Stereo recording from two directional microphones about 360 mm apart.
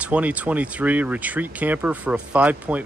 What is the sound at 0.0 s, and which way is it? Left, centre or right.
Speech, centre.